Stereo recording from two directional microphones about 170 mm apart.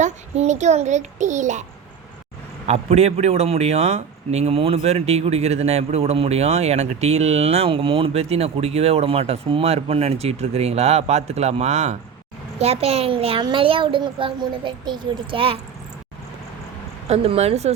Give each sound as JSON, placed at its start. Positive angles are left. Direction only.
{"t": 0.0, "sound": "a child's voice", "side_deg": -45}
{"t": 2.6, "sound": "a man's voice", "side_deg": -40}
{"t": 17.1, "sound": "a man's voice", "side_deg": -40}